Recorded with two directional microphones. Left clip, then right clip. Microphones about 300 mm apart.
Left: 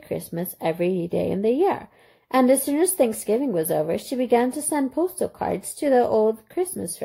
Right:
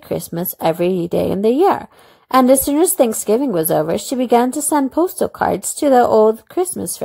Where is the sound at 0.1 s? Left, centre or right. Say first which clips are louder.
Right 6 dB; right.